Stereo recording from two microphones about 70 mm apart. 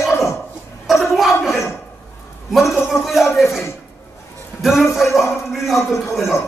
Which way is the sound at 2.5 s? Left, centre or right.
Centre.